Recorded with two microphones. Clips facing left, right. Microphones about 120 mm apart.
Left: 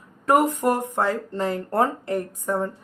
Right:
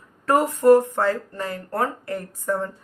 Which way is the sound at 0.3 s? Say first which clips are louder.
Right 4 dB; 15° left (ahead or behind).